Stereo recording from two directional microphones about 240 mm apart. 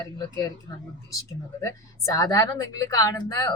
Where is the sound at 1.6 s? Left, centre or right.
Centre.